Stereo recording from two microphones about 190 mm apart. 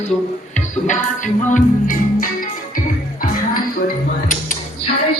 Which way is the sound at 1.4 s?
45° left (ahead or behind).